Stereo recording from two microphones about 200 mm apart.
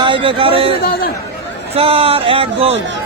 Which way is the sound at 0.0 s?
25° right (ahead or behind).